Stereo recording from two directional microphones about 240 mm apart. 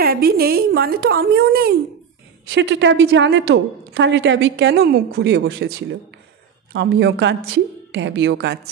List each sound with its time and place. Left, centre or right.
0.0 s a woman's voice: right